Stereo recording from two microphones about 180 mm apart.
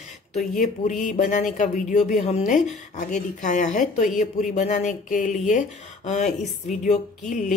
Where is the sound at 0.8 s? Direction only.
45° left (ahead or behind).